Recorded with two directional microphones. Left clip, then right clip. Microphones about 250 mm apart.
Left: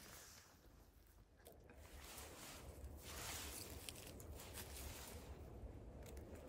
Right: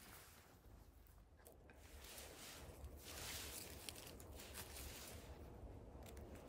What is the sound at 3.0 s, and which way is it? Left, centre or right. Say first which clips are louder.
Boat: left 1 dB; left.